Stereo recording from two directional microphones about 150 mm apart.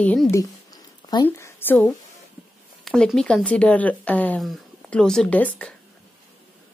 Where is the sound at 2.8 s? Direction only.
Centre (ahead or behind).